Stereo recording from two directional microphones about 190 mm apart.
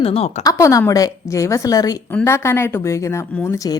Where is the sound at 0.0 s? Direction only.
30° left (ahead or behind).